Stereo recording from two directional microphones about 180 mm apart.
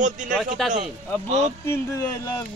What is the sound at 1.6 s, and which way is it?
Speech, 15° left (ahead or behind).